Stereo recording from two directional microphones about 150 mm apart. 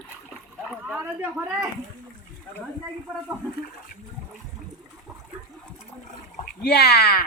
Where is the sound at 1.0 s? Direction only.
10° right (ahead or behind).